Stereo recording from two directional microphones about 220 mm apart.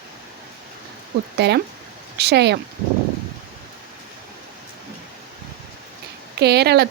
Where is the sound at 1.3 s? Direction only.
50° right (ahead or behind).